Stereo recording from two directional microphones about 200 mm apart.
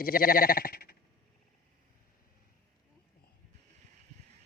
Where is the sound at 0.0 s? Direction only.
45° left (ahead or behind).